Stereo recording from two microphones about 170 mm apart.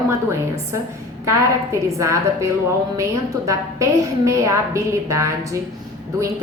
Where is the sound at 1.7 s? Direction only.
15° right (ahead or behind).